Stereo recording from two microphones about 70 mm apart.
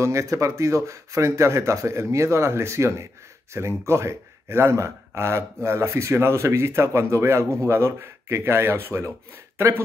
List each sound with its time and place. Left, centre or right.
0.0 s speech: right